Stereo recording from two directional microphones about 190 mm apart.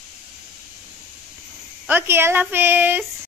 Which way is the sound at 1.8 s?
10° right (ahead or behind).